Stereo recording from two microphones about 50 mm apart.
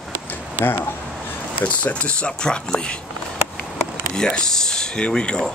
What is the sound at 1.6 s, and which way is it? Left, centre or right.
Speech, left.